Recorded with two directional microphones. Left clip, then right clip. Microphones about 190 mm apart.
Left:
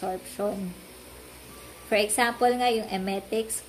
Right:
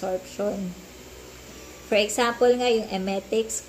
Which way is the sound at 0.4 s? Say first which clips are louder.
Right 1 dB; 15° left (ahead or behind).